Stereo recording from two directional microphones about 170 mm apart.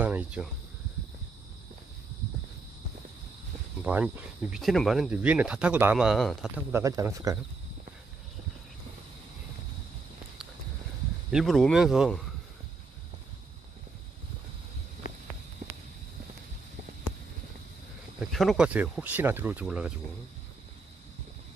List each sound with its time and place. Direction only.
0.0 s cricket: 10° right (ahead or behind)
3.8 s speech: 10° right (ahead or behind)
6.8 s speech: 20° right (ahead or behind)
11.3 s speech: centre (ahead or behind)
18.3 s speech: centre (ahead or behind)